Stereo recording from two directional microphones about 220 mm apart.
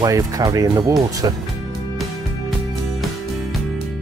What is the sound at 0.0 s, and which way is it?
Speech, 15° right (ahead or behind).